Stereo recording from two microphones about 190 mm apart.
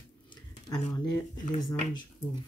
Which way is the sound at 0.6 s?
20° left (ahead or behind).